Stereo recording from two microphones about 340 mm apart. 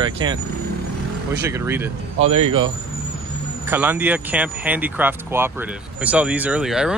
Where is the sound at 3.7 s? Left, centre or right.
Centre.